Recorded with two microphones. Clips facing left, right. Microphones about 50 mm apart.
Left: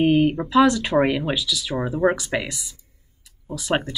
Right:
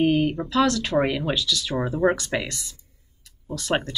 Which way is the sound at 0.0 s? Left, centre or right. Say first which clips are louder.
Left 3 dB; centre.